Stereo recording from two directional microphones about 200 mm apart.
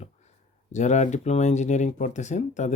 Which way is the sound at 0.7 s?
35° left (ahead or behind).